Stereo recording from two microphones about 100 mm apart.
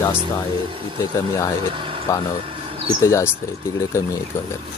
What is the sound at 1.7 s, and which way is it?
Speech, 60° right (ahead or behind).